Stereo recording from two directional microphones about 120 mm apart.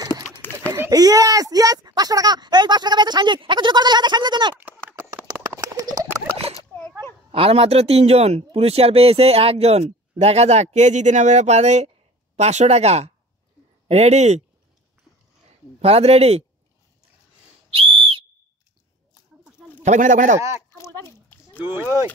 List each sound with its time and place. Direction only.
0.4 s a sound: 15° left (ahead or behind)
0.7 s speech: 30° right (ahead or behind)
4.6 s clip-clop: 15° right (ahead or behind)
6.7 s a sound: 15° left (ahead or behind)
7.2 s a man's voice: 50° right (ahead or behind); by 14.4 s 65° right (ahead or behind)
15.8 s a man's voice: 60° right (ahead or behind)
19.8 s speech: 85° right
20.3 s speech: 25° right (ahead or behind)
20.7 s a sound: 25° left (ahead or behind)
21.5 s speech: 20° right (ahead or behind)